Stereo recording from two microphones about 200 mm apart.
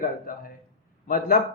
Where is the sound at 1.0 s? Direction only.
45° left (ahead or behind).